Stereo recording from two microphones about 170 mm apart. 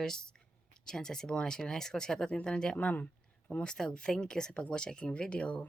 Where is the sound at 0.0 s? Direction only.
5° left (ahead or behind).